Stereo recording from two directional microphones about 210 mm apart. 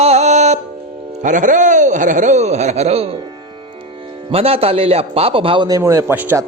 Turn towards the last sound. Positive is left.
turn(degrees=-10)  # may be behind; listen again after turning